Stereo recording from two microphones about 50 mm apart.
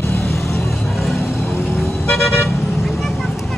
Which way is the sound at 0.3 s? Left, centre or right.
Left.